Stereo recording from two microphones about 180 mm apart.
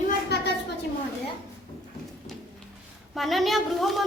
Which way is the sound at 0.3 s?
65° left (ahead or behind).